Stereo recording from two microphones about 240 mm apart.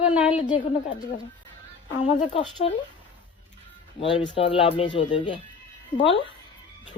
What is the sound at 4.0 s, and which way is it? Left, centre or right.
Speech, left.